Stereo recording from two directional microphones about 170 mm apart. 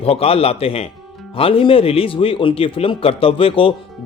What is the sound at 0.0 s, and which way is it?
Speech, 35° left (ahead or behind).